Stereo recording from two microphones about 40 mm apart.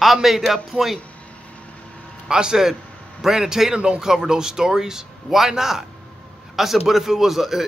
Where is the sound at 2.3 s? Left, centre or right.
Centre.